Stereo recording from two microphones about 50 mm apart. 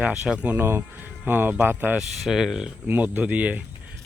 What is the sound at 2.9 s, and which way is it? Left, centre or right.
Speech, right.